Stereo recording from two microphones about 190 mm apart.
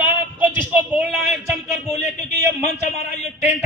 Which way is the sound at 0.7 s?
5° right (ahead or behind).